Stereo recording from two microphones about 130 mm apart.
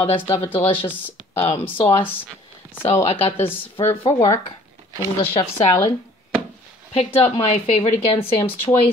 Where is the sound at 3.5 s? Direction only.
45° left (ahead or behind).